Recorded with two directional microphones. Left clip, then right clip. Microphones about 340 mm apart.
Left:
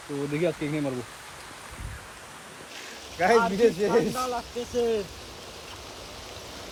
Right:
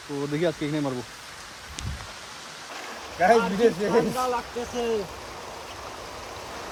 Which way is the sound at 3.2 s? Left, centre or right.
Centre.